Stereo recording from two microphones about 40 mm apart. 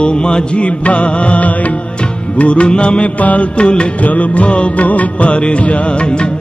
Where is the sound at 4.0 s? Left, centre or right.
Left.